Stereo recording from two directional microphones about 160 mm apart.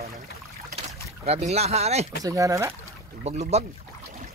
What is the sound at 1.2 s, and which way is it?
Speech, 40° right (ahead or behind).